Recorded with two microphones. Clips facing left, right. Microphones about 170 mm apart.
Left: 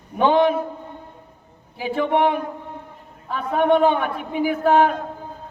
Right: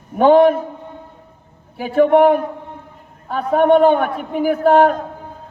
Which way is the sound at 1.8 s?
45° right (ahead or behind).